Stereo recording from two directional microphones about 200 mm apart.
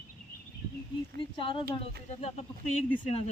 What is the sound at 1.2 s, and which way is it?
Speech, 25° left (ahead or behind).